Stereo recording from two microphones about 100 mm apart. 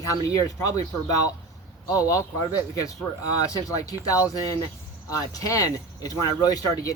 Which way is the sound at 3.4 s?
35° left (ahead or behind).